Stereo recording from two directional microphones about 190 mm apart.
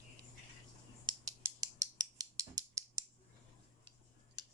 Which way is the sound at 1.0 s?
15° right (ahead or behind).